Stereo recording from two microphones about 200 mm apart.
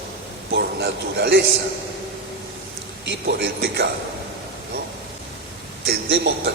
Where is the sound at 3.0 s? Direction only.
60° right (ahead or behind).